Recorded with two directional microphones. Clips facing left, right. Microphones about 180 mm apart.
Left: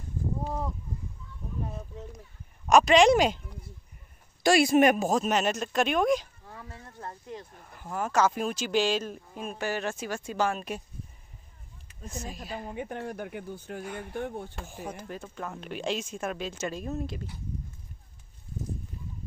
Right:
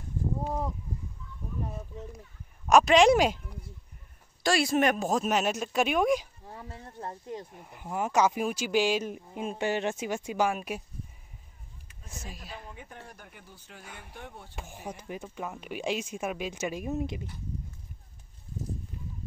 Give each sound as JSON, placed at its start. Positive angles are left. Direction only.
{"t": 1.7, "sound": "a sound", "side_deg": -5}
{"t": 2.7, "sound": "speech", "side_deg": 0}
{"t": 4.4, "sound": "speech", "side_deg": 15}
{"t": 6.4, "sound": "speech", "side_deg": -25}
{"t": 12.1, "sound": "speech", "side_deg": -5}
{"t": 12.6, "sound": "speech", "side_deg": 65}
{"t": 13.8, "sound": "speech", "side_deg": 0}
{"t": 14.1, "sound": "speech", "side_deg": 50}
{"t": 14.5, "sound": "speech", "side_deg": -15}